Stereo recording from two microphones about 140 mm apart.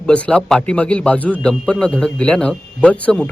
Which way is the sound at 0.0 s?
5° left (ahead or behind).